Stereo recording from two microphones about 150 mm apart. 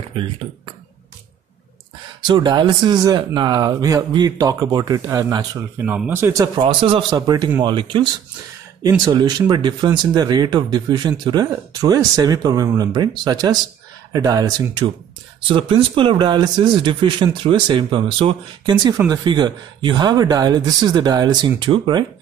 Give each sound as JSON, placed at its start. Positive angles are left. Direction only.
{"t": 2.2, "sound": "speech", "side_deg": -30}
{"t": 5.9, "sound": "speech", "side_deg": -10}
{"t": 6.4, "sound": "speech", "side_deg": -30}